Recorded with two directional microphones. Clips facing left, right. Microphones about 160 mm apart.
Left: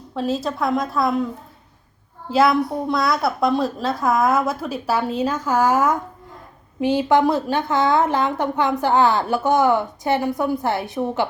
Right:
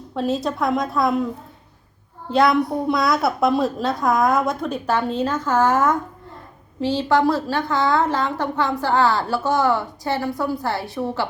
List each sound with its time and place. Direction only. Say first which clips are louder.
0.1 s a woman's voice: right 1 dB; centre (ahead or behind)
2.3 s a woman's voice: even; centre (ahead or behind); by 11.3 s 20° left (ahead or behind)